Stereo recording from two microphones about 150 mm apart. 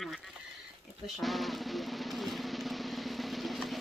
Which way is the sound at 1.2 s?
Centre (ahead or behind).